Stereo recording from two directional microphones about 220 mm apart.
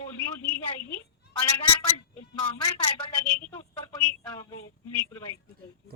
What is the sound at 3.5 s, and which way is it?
Speech, 20° left (ahead or behind).